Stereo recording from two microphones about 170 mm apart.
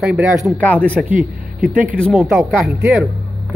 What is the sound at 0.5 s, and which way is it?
Speech, 10° left (ahead or behind).